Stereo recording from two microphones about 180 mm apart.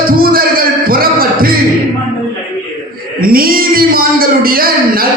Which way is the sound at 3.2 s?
55° right (ahead or behind).